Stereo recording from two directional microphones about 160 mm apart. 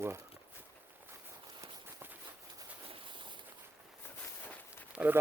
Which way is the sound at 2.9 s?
30° right (ahead or behind).